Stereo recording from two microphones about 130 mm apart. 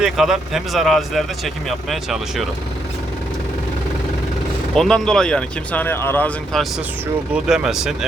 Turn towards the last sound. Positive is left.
turn(degrees=-5)  # may be behind; listen again after turning